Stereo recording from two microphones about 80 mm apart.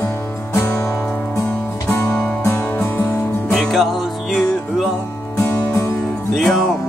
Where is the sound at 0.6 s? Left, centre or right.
Left.